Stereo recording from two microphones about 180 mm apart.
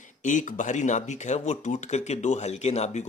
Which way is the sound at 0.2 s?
45° left (ahead or behind).